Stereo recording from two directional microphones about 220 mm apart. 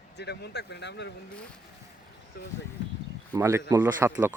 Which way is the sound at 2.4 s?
45° left (ahead or behind).